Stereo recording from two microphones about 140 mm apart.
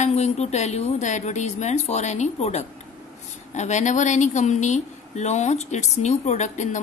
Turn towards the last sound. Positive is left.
turn(degrees=60)  # may be behind; listen again after turning